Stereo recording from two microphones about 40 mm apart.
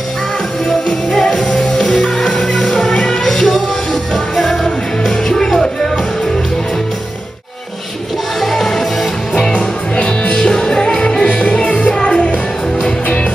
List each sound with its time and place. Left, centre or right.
1.1 s music: centre
4.6 s music: centre
8.4 s music: centre
9.5 s music: left